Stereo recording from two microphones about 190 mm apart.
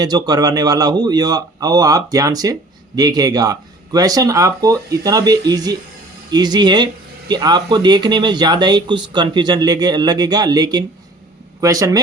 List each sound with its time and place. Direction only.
0.0 s a man's voice: 20° right (ahead or behind)